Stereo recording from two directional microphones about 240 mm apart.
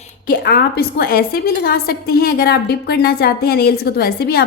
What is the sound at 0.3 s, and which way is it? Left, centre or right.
Speech, left.